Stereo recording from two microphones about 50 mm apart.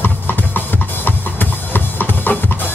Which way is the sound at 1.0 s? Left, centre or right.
Left.